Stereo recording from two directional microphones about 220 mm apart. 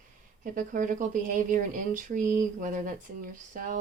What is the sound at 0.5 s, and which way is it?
Speech, 35° right (ahead or behind).